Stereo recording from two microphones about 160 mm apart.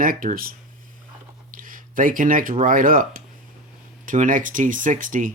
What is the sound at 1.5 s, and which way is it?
Speech, 55° right (ahead or behind).